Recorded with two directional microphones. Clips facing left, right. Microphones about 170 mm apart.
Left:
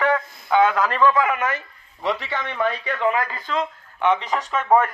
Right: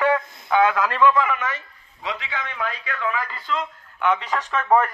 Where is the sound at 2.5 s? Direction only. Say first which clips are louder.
Left 8 dB; 70° left (ahead or behind).